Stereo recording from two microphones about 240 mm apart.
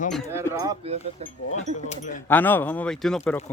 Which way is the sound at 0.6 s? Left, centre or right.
Centre.